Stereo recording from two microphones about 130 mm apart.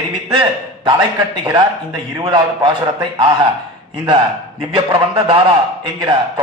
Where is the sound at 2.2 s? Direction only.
40° right (ahead or behind).